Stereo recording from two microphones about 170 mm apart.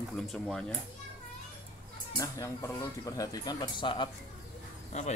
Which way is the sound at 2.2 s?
15° left (ahead or behind).